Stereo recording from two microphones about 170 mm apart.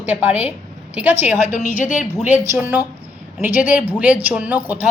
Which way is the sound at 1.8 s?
45° left (ahead or behind).